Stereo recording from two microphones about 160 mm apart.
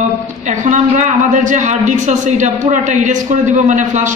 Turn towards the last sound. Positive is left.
turn(degrees=-50)  # may be behind; listen again after turning